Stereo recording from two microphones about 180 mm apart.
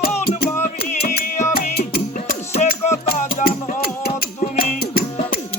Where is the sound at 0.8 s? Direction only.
55° left (ahead or behind).